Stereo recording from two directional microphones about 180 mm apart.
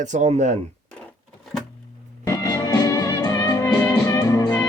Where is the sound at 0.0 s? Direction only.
40° right (ahead or behind).